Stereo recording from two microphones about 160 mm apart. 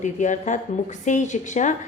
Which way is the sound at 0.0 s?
50° left (ahead or behind).